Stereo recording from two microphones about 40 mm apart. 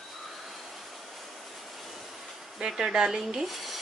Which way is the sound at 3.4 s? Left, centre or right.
Centre.